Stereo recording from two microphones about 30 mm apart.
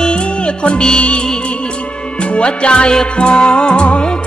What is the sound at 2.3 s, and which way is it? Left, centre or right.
Music, left.